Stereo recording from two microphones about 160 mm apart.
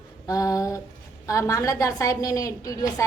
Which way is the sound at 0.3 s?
20° left (ahead or behind).